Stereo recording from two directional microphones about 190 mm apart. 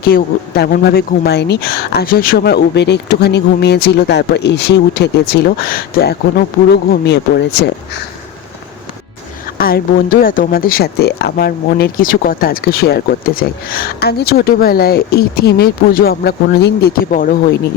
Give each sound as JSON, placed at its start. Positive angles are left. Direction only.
{"t": 0.0, "sound": "speech", "side_deg": 55}
{"t": 9.6, "sound": "speech", "side_deg": 50}